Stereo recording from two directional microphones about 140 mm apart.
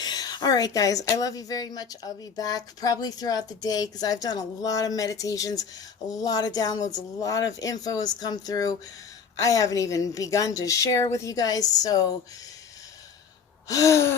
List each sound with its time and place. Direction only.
0.0 s speech: 30° left (ahead or behind)
13.7 s speech: 25° left (ahead or behind)